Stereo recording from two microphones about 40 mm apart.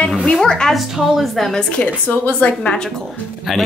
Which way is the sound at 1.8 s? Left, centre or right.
Left.